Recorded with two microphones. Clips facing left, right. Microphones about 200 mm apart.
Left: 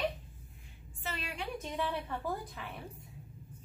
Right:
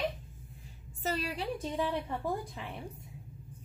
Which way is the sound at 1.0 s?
35° right (ahead or behind).